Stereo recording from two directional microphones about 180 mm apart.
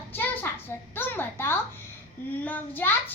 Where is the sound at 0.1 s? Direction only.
10° left (ahead or behind).